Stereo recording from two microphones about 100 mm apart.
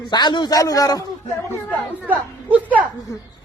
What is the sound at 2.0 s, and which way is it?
Speech, 15° right (ahead or behind).